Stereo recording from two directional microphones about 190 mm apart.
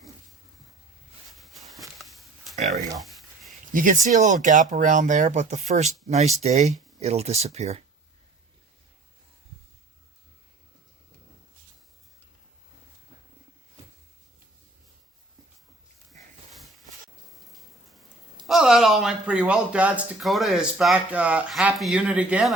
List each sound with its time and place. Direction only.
1.4 s a sound: centre (ahead or behind)
3.7 s speech: 45° right (ahead or behind)
17.3 s rain: centre (ahead or behind)
18.4 s a man's voice: centre (ahead or behind)